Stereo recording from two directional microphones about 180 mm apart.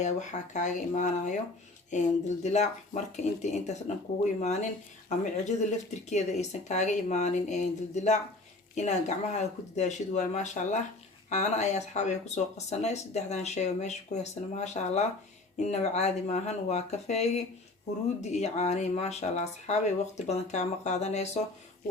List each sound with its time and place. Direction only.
0.0 s speech: 40° left (ahead or behind)